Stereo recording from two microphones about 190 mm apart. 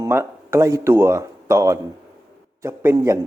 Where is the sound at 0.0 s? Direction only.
15° right (ahead or behind).